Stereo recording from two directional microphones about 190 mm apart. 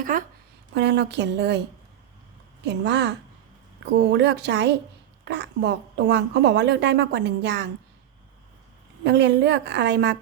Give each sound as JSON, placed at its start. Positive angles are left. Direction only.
{"t": 0.0, "sound": "speech", "side_deg": -45}
{"t": 0.7, "sound": "a woman's voice", "side_deg": -65}
{"t": 2.6, "sound": "a woman's voice", "side_deg": -65}
{"t": 9.0, "sound": "a woman's voice", "side_deg": -65}